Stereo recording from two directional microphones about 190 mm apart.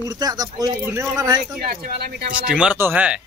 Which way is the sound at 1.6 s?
50° right (ahead or behind).